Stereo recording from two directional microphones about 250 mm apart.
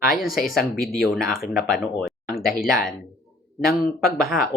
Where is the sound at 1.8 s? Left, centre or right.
Centre.